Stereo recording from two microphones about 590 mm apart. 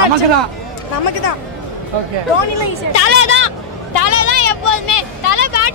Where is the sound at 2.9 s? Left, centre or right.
Left.